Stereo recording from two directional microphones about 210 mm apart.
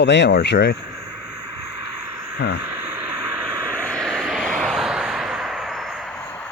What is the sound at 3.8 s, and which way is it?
Vehicle, 5° left (ahead or behind).